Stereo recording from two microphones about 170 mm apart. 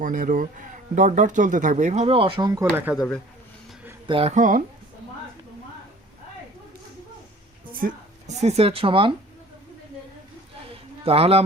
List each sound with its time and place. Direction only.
0.0 s speech: 50° right (ahead or behind); by 3.0 s 10° right (ahead or behind)
4.0 s speech: 30° right (ahead or behind); by 4.6 s 50° right (ahead or behind)
7.7 s speech: 55° right (ahead or behind); by 9.1 s 30° right (ahead or behind)
11.0 s speech: 35° right (ahead or behind)